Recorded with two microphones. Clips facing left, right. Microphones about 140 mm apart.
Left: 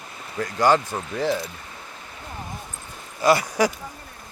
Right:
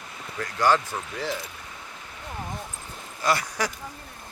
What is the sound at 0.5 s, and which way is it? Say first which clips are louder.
Speech: left 3 dB; 15° left (ahead or behind).